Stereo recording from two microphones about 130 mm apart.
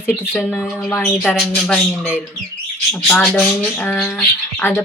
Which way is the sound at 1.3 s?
5° left (ahead or behind).